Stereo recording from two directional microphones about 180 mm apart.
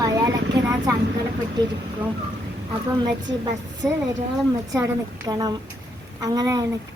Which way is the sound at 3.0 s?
25° right (ahead or behind).